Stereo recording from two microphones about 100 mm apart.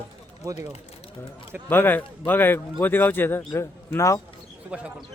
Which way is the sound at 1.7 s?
20° left (ahead or behind).